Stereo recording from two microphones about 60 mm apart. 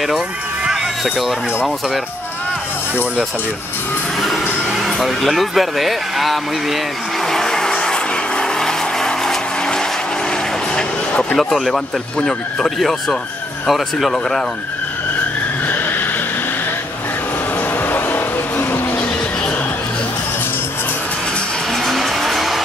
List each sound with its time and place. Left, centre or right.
0.7 s a sound: centre
4.6 s speech: centre
7.2 s vehicle: centre
10.7 s music: centre
11.3 s speech: centre
15.6 s vehicle: left
17.7 s vehicle: left
21.7 s music: centre